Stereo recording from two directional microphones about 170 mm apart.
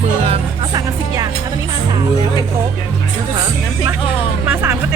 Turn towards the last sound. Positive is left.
turn(degrees=-15)  # may be behind; listen again after turning